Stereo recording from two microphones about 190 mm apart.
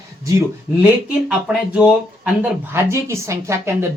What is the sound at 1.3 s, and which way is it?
Speech, 5° right (ahead or behind).